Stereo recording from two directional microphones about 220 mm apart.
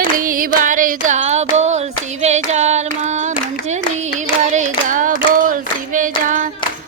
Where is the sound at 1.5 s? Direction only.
30° right (ahead or behind).